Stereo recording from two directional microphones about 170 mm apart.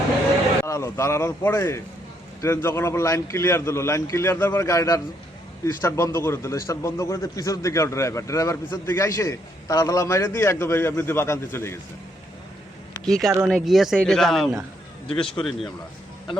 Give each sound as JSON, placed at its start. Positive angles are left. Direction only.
{"t": 0.6, "sound": "a man's voice", "side_deg": 15}
{"t": 13.1, "sound": "speech", "side_deg": 5}